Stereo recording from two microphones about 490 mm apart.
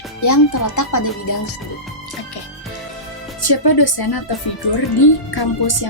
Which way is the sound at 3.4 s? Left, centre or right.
Left.